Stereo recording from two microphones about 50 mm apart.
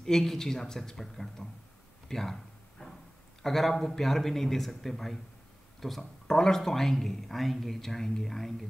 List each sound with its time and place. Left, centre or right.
0.0 s speech: centre
2.8 s a sound: centre
3.4 s a man's voice: centre